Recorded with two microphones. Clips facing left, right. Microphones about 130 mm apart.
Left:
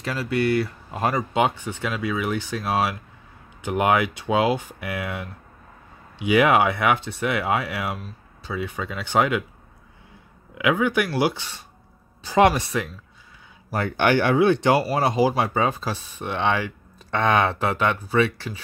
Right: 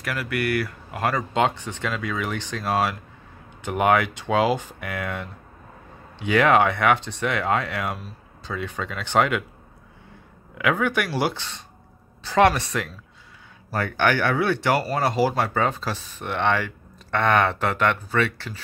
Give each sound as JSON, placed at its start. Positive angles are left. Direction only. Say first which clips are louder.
{"t": 0.0, "sound": "speech", "louder": "left 3 dB", "side_deg": 25}
{"t": 1.3, "sound": "speech", "louder": "even", "side_deg": 10}
{"t": 10.6, "sound": "speech", "louder": "left 2 dB", "side_deg": 5}